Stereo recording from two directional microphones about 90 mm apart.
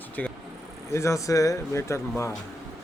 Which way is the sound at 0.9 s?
35° left (ahead or behind).